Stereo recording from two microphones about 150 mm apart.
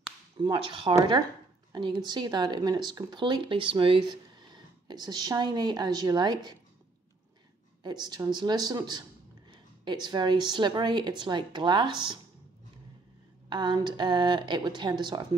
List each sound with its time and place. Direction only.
0.5 s speech: 35° right (ahead or behind)
2.0 s speech: 30° right (ahead or behind)
7.8 s speech: 30° right (ahead or behind)
13.5 s speech: 30° right (ahead or behind)